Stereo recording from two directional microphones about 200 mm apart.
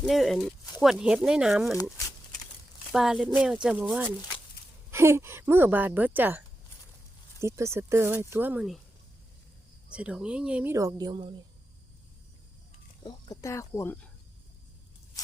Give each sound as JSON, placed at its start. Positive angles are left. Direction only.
{"t": 0.0, "sound": "speech", "side_deg": 0}
{"t": 1.7, "sound": "speech", "side_deg": 15}
{"t": 2.9, "sound": "speech", "side_deg": 0}
{"t": 9.9, "sound": "speech", "side_deg": -5}
{"t": 13.0, "sound": "speech", "side_deg": 20}